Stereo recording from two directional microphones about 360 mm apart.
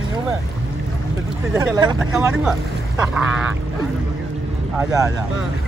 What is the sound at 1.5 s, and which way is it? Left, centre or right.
Speech, centre.